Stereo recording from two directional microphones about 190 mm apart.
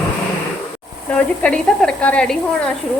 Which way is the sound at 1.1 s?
5° left (ahead or behind).